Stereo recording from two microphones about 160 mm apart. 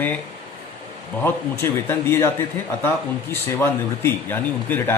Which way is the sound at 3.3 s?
15° left (ahead or behind).